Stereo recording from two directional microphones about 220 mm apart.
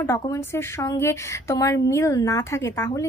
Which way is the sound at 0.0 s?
15° left (ahead or behind).